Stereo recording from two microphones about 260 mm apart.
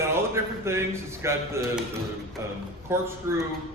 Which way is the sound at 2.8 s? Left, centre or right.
Centre.